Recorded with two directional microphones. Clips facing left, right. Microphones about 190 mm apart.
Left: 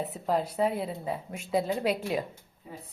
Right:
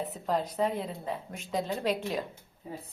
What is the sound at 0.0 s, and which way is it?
A woman's voice, 5° left (ahead or behind).